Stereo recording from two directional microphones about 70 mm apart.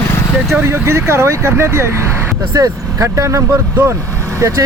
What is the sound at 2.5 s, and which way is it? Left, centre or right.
Speech, right.